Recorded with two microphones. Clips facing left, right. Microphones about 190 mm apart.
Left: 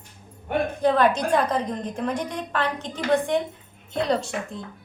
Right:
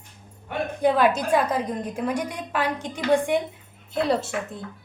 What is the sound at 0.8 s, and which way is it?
A woman's voice, 5° right (ahead or behind).